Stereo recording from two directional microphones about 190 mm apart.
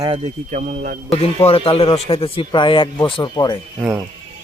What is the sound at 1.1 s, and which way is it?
Speech, 30° left (ahead or behind).